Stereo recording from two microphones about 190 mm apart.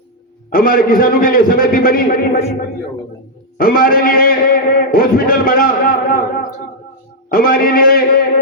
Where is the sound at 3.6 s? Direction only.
50° left (ahead or behind).